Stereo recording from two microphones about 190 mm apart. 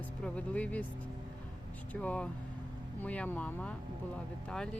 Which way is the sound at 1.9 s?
5° left (ahead or behind).